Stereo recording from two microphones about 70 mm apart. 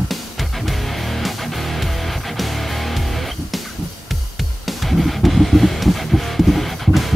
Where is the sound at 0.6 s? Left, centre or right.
Centre.